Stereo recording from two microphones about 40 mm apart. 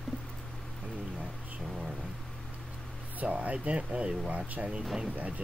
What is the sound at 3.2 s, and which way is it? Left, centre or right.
Speech, right.